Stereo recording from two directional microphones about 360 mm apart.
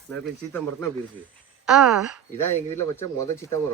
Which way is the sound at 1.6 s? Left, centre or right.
Centre.